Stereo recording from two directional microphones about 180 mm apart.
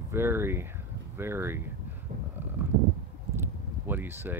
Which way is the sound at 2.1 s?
50° right (ahead or behind).